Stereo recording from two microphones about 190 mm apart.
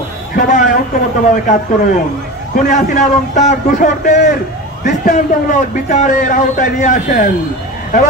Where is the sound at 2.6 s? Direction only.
40° left (ahead or behind).